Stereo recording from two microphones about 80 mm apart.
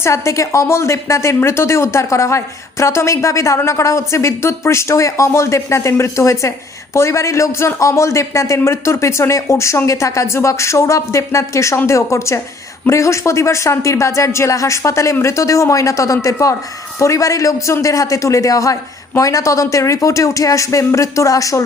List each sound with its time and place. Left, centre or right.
0.0 s a man's voice: left